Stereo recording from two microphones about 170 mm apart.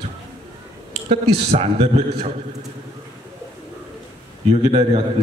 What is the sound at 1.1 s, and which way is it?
A man's voice, 40° right (ahead or behind).